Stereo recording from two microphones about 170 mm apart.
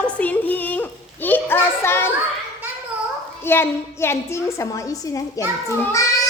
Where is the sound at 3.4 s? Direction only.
15° left (ahead or behind).